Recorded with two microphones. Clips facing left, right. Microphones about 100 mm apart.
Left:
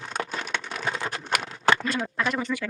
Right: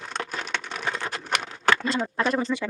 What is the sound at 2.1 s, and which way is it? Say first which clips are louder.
Speech: right 3 dB; 35° right (ahead or behind).